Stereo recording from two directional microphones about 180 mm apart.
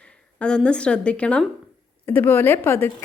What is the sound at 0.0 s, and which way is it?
A woman's voice, 5° left (ahead or behind).